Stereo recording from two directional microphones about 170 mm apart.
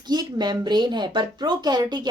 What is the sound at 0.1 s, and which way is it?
A woman's voice, 25° right (ahead or behind).